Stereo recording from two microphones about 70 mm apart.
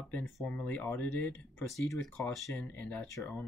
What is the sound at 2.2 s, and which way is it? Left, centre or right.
Speech, centre.